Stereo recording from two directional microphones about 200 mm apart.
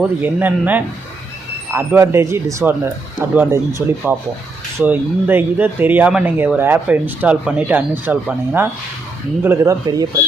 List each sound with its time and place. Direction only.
0.0 s speech: 10° right (ahead or behind)